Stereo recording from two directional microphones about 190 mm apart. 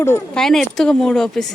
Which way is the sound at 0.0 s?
10° left (ahead or behind).